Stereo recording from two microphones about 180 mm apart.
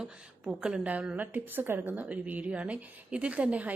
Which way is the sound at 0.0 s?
5° right (ahead or behind).